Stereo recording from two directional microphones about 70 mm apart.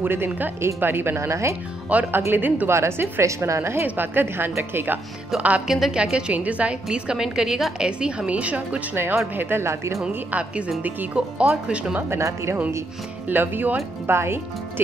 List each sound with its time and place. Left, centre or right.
0.0 s speech: right
1.9 s a woman's voice: right
2.7 s speech: right
3.8 s a woman's voice: right
5.3 s a woman's voice: centre
8.9 s speech: right
11.1 s a woman's voice: centre
12.1 s speech: right
13.3 s speech: right